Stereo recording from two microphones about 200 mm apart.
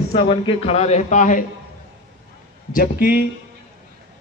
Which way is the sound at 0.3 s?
25° left (ahead or behind).